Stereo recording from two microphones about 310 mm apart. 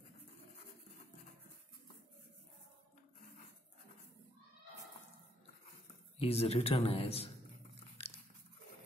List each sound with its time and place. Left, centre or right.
6.1 s a man's voice: centre